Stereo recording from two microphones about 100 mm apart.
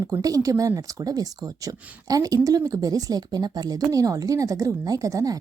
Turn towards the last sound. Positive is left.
turn(degrees=-35)  # may be behind; listen again after turning